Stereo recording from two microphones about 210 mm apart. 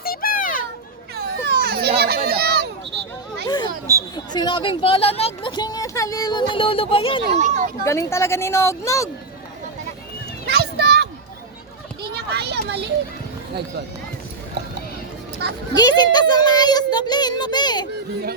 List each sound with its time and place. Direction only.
0.0 s children playing: 45° left (ahead or behind)
1.1 s children playing: 50° right (ahead or behind)
2.0 s crowd: 45° right (ahead or behind)
3.4 s children playing: 20° left (ahead or behind)
4.1 s speech: 20° left (ahead or behind)
7.3 s speech: 35° right (ahead or behind)
7.9 s speech: 15° left (ahead or behind)
10.4 s a sound: 50° right (ahead or behind)
12.0 s a child's voice: 50° right (ahead or behind)
15.7 s a child's voice: 20° left (ahead or behind)